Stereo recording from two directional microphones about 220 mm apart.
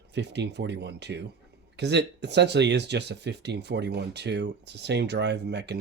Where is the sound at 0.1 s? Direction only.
50° right (ahead or behind).